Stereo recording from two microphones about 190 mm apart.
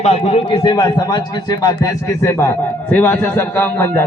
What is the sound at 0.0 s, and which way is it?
A man's voice, 30° left (ahead or behind).